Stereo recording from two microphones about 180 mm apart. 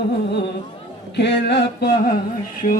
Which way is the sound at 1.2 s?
70° left (ahead or behind).